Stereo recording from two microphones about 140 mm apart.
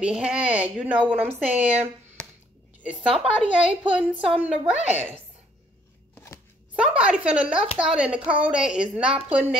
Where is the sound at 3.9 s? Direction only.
10° right (ahead or behind).